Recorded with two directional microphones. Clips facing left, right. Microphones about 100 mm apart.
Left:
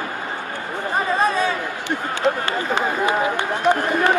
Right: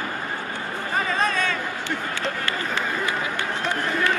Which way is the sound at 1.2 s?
15° left (ahead or behind).